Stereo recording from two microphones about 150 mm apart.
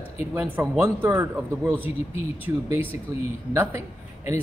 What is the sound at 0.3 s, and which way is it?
A man's voice, 15° right (ahead or behind).